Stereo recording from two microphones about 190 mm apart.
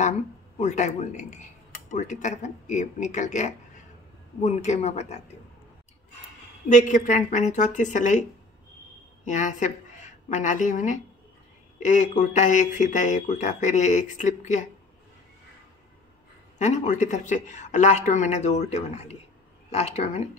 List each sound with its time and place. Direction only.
0.6 s speech: 40° left (ahead or behind)
6.7 s a woman's voice: 40° left (ahead or behind)
16.5 s speech: 40° left (ahead or behind)